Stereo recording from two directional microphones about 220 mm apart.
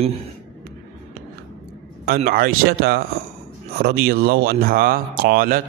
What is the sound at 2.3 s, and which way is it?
A man's voice, 40° right (ahead or behind).